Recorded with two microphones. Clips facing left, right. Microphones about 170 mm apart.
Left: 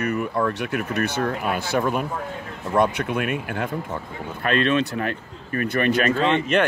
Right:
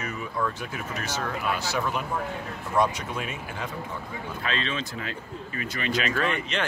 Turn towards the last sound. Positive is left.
turn(degrees=25)  # may be behind; listen again after turning